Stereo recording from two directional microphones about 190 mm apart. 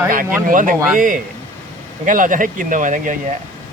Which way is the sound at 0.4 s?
45° right (ahead or behind).